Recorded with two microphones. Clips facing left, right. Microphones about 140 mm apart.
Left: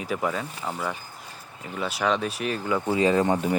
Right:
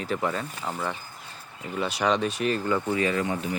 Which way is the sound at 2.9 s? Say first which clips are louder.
Left 7 dB; 30° left (ahead or behind).